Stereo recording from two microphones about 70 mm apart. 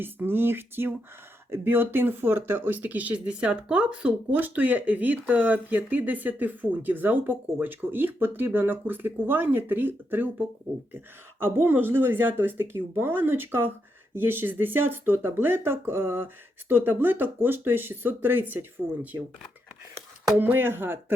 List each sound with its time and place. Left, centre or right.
0.0 s speech: right
20.3 s speech: right